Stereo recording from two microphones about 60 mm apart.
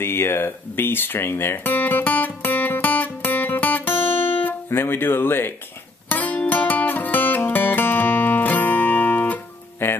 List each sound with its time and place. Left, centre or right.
0.0 s music: left
4.4 s speech: left
6.0 s music: left